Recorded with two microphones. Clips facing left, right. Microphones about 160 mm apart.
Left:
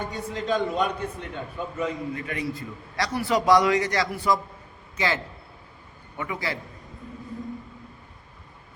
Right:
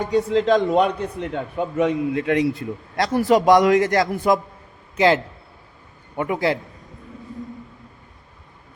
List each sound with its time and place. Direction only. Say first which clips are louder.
0.0 s a man's voice: right 12 dB; 85° right; by 4.4 s 50° right (ahead or behind)
4.9 s a man's voice: right 10 dB; 65° right (ahead or behind)